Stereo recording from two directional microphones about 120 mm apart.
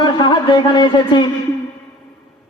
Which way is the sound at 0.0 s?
40° left (ahead or behind).